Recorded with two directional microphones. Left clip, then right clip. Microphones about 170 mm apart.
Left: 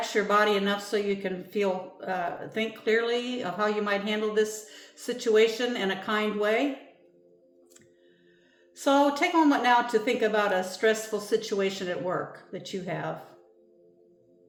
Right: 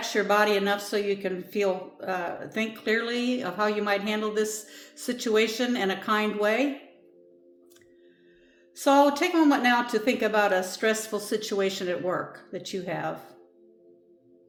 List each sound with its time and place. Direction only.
0.0 s speech: 30° right (ahead or behind)
8.7 s speech: 30° right (ahead or behind)